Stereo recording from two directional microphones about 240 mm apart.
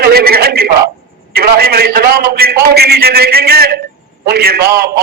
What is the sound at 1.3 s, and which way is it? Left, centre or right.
A man's voice, right.